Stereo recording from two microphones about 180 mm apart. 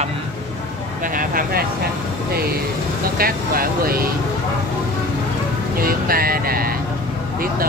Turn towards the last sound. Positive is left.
turn(degrees=-55)  # may be behind; listen again after turning